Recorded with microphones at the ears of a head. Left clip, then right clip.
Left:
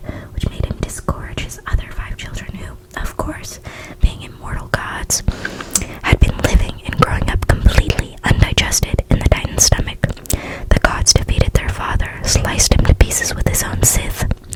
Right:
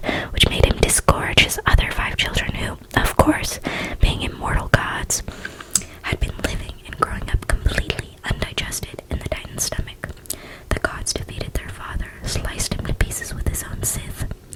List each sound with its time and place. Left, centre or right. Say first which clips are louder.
0.1 s whispering: right 12 dB; right
6.1 s whispering: left 9 dB; left